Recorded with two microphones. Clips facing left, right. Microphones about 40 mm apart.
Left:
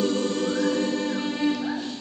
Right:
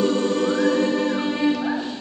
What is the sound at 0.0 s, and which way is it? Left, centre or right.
Music, centre.